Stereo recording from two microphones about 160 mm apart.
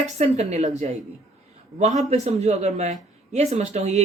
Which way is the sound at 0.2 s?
45° right (ahead or behind).